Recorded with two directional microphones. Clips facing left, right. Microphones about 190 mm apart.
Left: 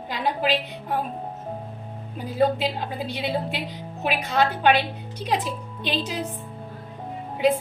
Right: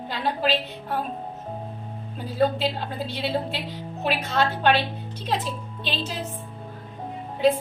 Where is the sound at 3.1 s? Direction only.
15° left (ahead or behind).